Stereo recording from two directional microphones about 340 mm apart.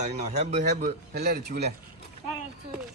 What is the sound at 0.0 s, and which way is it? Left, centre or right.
Speech, centre.